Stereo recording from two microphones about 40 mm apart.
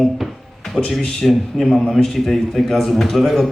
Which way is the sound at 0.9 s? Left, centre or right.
Centre.